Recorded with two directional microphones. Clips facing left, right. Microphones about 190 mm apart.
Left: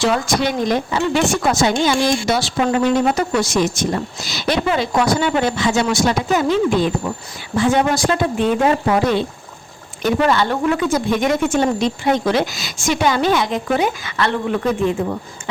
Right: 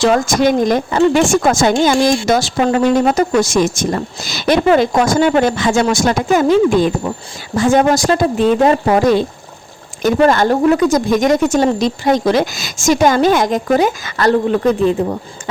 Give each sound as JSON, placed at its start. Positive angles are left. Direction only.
{"t": 0.0, "sound": "speech", "side_deg": -45}